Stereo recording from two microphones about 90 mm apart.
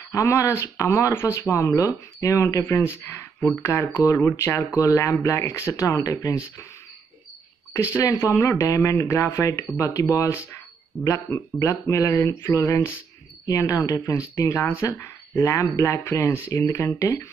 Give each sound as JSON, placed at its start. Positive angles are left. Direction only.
{"t": 0.1, "sound": "speech", "side_deg": 35}
{"t": 7.7, "sound": "speech", "side_deg": 35}